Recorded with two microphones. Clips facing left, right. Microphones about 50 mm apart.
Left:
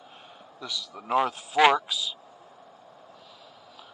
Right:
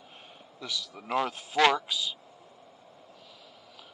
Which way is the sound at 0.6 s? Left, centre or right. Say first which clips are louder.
Even; right.